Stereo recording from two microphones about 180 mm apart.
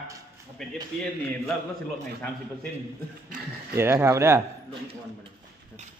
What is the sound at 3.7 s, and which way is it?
Speech, 15° right (ahead or behind).